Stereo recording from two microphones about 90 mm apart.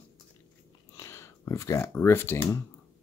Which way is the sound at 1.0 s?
35° left (ahead or behind).